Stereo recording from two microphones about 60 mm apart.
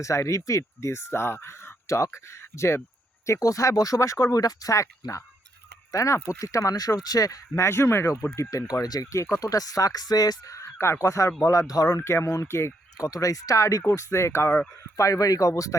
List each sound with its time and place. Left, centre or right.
0.0 s speech: left
3.2 s speech: left
7.6 s speech: left
8.4 s speech: left
8.7 s speech: left
11.7 s speech: left
11.9 s speech: left
13.0 s speech: left
13.8 s speech: left
14.9 s speech: left